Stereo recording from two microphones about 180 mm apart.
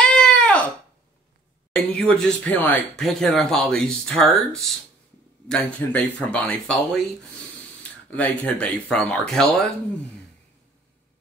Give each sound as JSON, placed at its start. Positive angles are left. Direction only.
{"t": 0.2, "sound": "a sound", "side_deg": 5}
{"t": 1.9, "sound": "speech", "side_deg": 5}
{"t": 8.1, "sound": "speech", "side_deg": 10}